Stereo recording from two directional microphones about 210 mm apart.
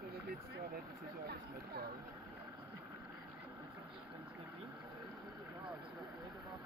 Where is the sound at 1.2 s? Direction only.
45° right (ahead or behind).